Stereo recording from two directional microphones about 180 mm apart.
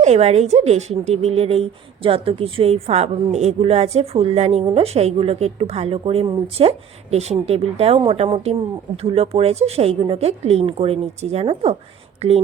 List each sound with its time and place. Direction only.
0.0 s a woman's voice: 35° right (ahead or behind)